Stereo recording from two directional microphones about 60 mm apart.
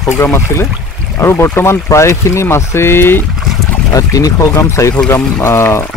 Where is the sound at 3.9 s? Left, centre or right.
Left.